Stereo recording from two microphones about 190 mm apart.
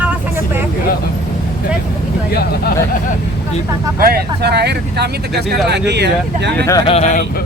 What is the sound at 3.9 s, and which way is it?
Speech, 55° right (ahead or behind).